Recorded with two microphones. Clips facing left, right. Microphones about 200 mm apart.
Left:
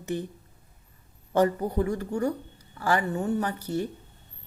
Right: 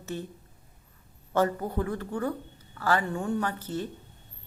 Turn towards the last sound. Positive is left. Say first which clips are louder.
# left 2 dB
turn(degrees=10)  # may be behind; listen again after turning